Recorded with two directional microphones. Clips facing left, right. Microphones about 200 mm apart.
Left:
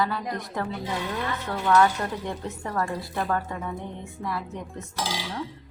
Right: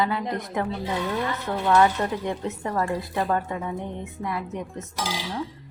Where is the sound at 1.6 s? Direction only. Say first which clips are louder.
Right 1 dB; 20° right (ahead or behind).